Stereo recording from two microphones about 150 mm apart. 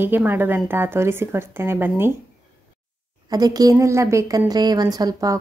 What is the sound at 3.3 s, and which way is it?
A woman's voice, 25° right (ahead or behind).